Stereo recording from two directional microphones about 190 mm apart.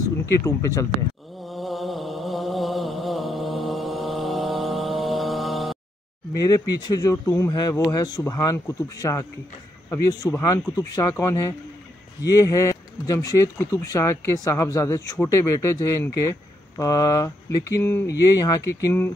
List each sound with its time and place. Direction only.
0.3 s speech: 15° left (ahead or behind)
1.4 s chant: centre (ahead or behind)
6.3 s speech: 20° left (ahead or behind)